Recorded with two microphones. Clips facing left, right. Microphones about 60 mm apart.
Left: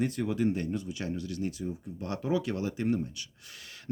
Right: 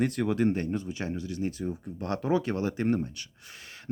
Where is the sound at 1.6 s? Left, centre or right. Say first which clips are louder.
Right 3 dB; right.